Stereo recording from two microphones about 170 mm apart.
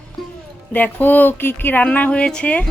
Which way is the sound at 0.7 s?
10° left (ahead or behind).